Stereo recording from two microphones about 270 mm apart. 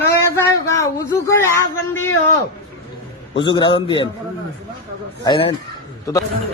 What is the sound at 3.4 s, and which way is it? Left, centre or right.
Speech, centre.